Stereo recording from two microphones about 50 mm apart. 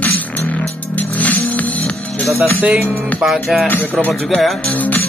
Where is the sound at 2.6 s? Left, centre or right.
Right.